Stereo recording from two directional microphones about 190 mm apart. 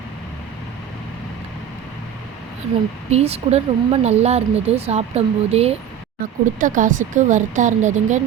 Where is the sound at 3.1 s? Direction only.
35° right (ahead or behind).